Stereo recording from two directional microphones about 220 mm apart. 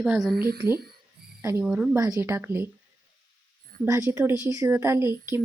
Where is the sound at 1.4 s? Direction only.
5° right (ahead or behind).